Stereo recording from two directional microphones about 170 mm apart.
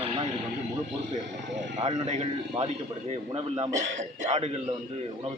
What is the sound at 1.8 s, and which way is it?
Speech, 40° right (ahead or behind).